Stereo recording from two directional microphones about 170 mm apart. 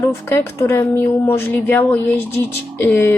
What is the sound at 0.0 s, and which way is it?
Speech, 15° left (ahead or behind).